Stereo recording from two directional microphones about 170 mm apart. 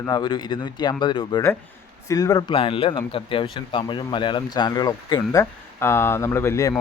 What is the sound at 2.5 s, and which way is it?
Speech, 30° left (ahead or behind).